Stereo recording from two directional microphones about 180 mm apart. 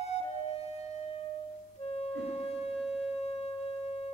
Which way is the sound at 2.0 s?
35° left (ahead or behind).